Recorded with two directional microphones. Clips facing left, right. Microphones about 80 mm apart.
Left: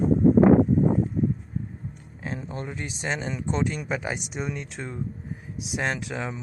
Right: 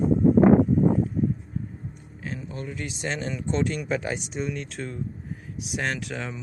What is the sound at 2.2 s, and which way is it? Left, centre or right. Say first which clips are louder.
Speech: left 1 dB; left.